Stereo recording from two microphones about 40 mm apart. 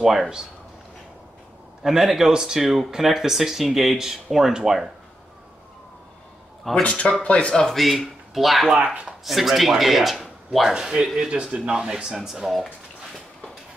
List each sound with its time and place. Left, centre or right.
0.0 s speech: centre
1.8 s speech: centre
6.7 s speech: left
7.7 s speech: centre
10.7 s speech: centre